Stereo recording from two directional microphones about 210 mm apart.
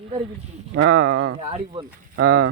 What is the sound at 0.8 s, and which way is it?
Speech, 90° right.